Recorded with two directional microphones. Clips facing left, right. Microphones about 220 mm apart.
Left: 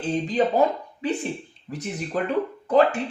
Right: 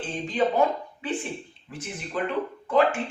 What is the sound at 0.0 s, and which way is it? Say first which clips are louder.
Speech: left 3 dB; 35° left (ahead or behind).